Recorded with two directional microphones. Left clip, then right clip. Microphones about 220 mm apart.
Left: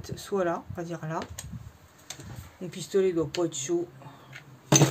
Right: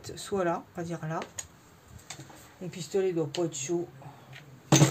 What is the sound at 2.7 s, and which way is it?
Speech, 25° left (ahead or behind).